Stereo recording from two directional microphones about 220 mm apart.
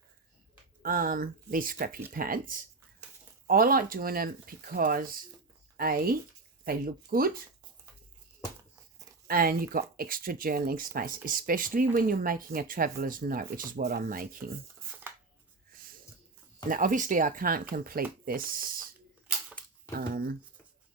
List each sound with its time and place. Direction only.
0.8 s speech: 40° right (ahead or behind)
9.2 s speech: 40° right (ahead or behind)
16.6 s speech: 40° right (ahead or behind)
20.0 s speech: 45° right (ahead or behind)